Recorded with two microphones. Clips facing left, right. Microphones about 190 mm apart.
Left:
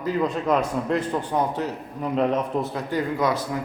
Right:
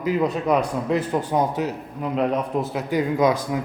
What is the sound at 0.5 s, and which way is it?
A man's voice, 5° right (ahead or behind).